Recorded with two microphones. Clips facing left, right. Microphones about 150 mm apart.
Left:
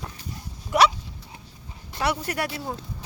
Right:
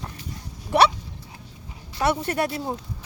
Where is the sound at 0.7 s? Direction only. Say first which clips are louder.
Right 1 dB; 30° right (ahead or behind).